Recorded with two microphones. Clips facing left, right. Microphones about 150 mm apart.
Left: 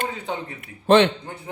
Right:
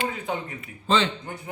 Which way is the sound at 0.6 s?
65° left (ahead or behind).